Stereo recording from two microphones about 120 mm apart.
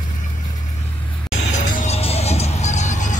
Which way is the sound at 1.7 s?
60° left (ahead or behind).